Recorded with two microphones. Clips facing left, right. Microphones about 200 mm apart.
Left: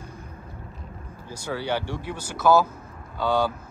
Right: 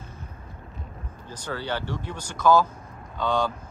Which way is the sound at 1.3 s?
10° left (ahead or behind).